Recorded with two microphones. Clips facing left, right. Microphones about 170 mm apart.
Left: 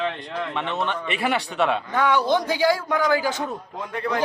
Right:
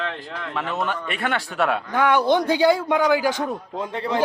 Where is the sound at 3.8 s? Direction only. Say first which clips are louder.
Right 1 dB; 25° right (ahead or behind).